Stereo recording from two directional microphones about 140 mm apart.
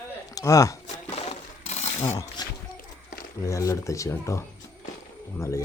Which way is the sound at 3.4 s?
20° left (ahead or behind).